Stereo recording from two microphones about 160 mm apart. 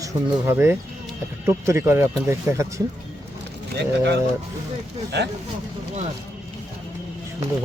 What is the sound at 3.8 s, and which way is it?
Speech, 90° right.